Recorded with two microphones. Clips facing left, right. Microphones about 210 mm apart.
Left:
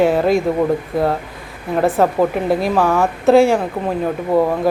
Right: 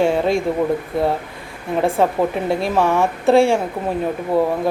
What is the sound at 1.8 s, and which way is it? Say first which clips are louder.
Speech: left 3 dB; centre (ahead or behind).